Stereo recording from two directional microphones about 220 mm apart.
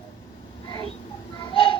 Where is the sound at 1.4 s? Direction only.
20° left (ahead or behind).